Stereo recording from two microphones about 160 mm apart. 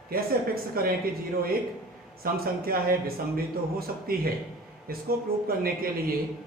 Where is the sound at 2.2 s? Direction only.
70° right (ahead or behind).